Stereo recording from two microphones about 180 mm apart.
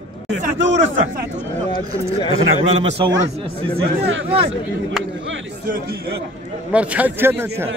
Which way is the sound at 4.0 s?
90° right.